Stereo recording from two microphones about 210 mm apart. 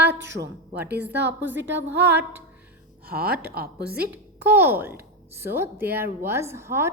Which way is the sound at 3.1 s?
45° right (ahead or behind).